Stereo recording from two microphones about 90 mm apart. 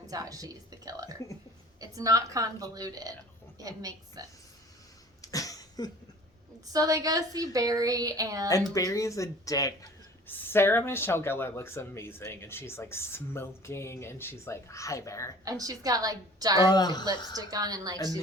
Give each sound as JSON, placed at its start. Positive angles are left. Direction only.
{"t": 0.1, "sound": "a woman's voice", "side_deg": -40}
{"t": 5.2, "sound": "cough", "side_deg": 40}
{"t": 6.7, "sound": "a woman's voice", "side_deg": -40}
{"t": 8.7, "sound": "speech", "side_deg": 40}
{"t": 10.2, "sound": "speech", "side_deg": 25}
{"t": 15.4, "sound": "a woman's voice", "side_deg": -40}
{"t": 16.6, "sound": "a woman's voice", "side_deg": 50}
{"t": 17.3, "sound": "a woman's voice", "side_deg": -45}